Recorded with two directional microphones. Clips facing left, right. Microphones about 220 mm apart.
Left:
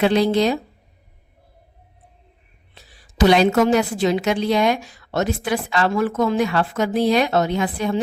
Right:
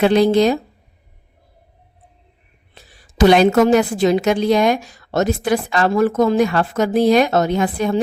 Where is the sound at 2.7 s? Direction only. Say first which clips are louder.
Right 3 dB; 50° right (ahead or behind).